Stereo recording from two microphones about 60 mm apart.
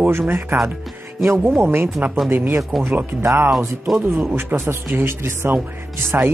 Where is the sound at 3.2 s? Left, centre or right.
Right.